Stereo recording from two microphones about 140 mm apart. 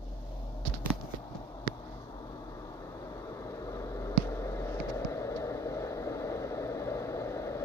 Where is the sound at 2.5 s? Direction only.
25° left (ahead or behind).